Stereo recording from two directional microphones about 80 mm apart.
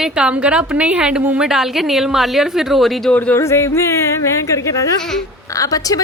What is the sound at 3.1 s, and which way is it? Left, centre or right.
Speech, centre.